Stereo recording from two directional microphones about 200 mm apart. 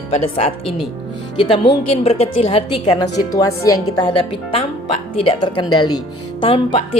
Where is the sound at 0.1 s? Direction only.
30° left (ahead or behind).